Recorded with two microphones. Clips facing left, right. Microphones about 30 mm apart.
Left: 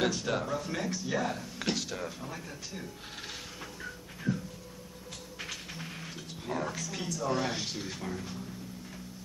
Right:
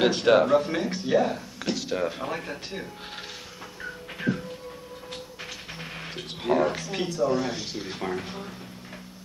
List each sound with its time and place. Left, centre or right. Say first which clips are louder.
0.0 s speech: right 11 dB; right
0.6 s speech: right 8 dB; right
1.1 s speech: right 10 dB; centre
1.6 s a sound: right 2 dB; centre
1.9 s speech: right 10 dB; right
2.1 s speech: right 10 dB; right
4.2 s music: right 6 dB; right
5.8 s music: right 5 dB; right
6.1 s speech: right 13 dB; right
7.2 s a man's voice: right 5 dB; centre
8.0 s speech: right 7 dB; right